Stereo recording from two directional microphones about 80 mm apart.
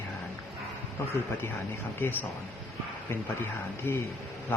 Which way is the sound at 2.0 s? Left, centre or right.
Left.